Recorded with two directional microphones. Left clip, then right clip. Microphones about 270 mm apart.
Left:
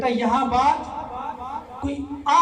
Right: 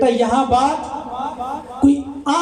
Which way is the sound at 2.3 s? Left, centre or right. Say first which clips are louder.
Left 2 dB; right.